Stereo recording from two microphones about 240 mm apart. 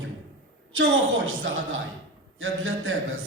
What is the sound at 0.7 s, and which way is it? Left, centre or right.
A woman's voice, right.